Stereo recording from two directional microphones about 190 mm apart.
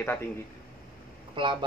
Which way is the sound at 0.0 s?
10° left (ahead or behind).